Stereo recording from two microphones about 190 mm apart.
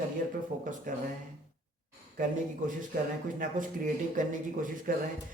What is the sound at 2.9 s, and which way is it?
Speech, 45° right (ahead or behind).